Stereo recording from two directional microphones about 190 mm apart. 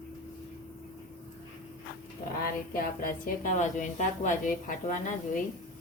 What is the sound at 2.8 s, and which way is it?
A woman's voice, 50° left (ahead or behind).